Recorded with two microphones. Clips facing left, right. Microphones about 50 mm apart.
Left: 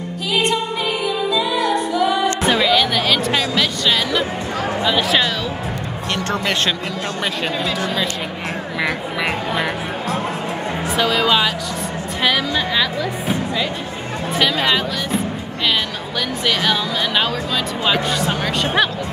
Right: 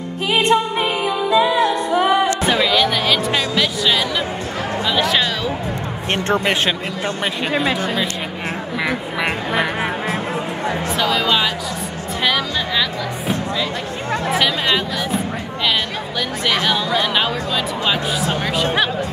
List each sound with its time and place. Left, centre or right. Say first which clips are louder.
0.3 s music: right 3 dB; right
2.4 s music: even; centre
4.8 s speech: even; centre
6.1 s speech: right 3 dB; right
11.0 s speech: left 2 dB; centre
16.4 s speech: right 1 dB; centre